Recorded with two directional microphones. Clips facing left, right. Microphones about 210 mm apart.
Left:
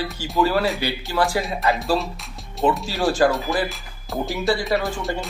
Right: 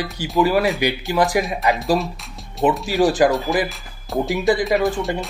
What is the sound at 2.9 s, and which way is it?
Speech, 15° right (ahead or behind).